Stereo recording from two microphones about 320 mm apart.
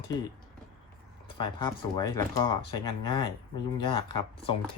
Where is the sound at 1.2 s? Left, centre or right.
Centre.